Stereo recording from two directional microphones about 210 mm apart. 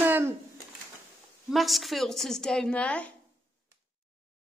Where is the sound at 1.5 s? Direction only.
Centre (ahead or behind).